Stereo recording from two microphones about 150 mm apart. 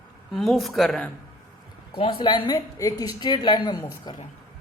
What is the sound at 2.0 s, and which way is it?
A woman's voice, 35° left (ahead or behind).